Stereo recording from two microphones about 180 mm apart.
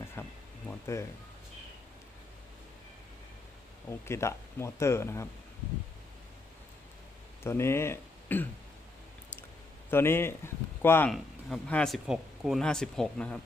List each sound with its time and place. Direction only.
0.2 s a sound: 15° left (ahead or behind)
0.7 s music: 15° left (ahead or behind)
3.8 s speech: 15° left (ahead or behind)
7.4 s speech: 15° left (ahead or behind)
9.9 s speech: 15° left (ahead or behind)
11.1 s speech: centre (ahead or behind)